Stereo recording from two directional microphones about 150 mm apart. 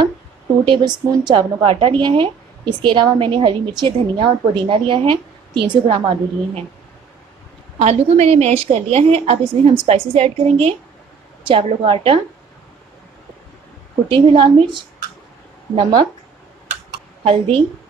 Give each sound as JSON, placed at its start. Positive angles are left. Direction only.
{"t": 0.7, "sound": "a woman's voice", "side_deg": -30}
{"t": 7.8, "sound": "a woman's voice", "side_deg": -45}
{"t": 14.0, "sound": "a woman's voice", "side_deg": -35}
{"t": 17.2, "sound": "a woman's voice", "side_deg": -40}